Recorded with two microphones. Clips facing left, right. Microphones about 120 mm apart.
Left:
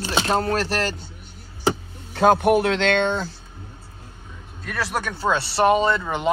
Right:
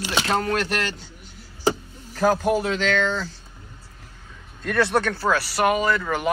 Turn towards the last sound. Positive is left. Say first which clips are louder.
# left 1 dB
turn(degrees=20)  # may be behind; listen again after turning